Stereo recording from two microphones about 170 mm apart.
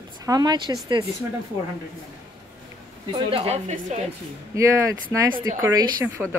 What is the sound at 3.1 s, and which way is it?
Speech, 30° right (ahead or behind).